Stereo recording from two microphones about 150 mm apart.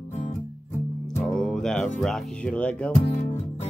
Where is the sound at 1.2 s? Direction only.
5° left (ahead or behind).